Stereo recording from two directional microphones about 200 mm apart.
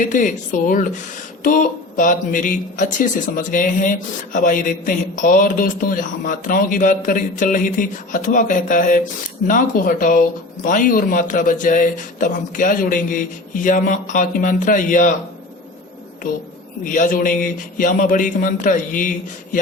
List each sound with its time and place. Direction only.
0.0 s a woman's voice: 40° left (ahead or behind)
16.8 s speech: 40° left (ahead or behind)